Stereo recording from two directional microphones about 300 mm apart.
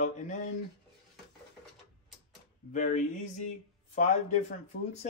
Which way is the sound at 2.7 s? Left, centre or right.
Left.